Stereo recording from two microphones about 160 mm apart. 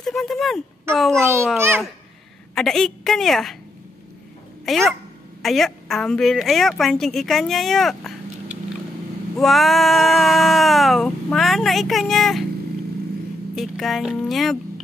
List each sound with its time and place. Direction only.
0.0 s a sound: centre (ahead or behind)
0.9 s a woman's voice: centre (ahead or behind)
1.2 s a child's voice: 15° right (ahead or behind)
2.5 s a woman's voice: 5° left (ahead or behind)
4.6 s a woman's voice: centre (ahead or behind)
13.6 s a woman's voice: centre (ahead or behind)